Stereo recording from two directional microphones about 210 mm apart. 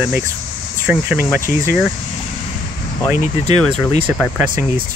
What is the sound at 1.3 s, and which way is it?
Speech, 15° right (ahead or behind).